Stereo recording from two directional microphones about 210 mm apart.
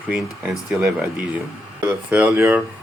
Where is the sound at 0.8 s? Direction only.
5° right (ahead or behind).